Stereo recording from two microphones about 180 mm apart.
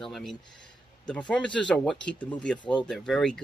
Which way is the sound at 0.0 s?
Centre (ahead or behind).